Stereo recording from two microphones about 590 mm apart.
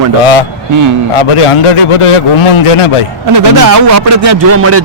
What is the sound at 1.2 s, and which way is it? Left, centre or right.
A man's voice, left.